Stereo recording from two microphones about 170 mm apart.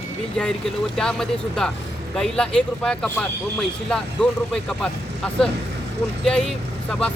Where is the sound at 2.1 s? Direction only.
5° left (ahead or behind).